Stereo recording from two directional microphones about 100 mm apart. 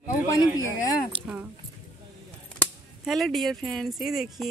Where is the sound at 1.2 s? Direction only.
15° right (ahead or behind).